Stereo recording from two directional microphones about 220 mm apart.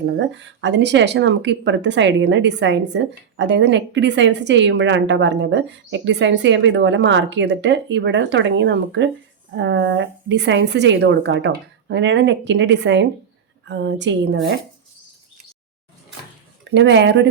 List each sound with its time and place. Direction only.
0.0 s speech: 55° right (ahead or behind)
16.6 s speech: 55° right (ahead or behind)